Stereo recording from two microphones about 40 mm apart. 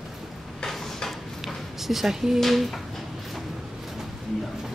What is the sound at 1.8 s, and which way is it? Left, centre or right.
Speech, centre.